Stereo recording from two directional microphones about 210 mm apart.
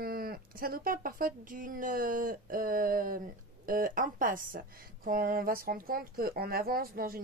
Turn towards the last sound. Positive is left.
turn(degrees=-45)  # may be behind; listen again after turning